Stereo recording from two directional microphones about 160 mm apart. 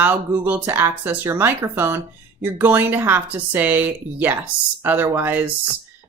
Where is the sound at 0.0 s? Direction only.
10° right (ahead or behind).